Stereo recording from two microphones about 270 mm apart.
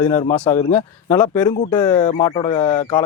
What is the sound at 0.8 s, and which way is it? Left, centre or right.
Speech, centre.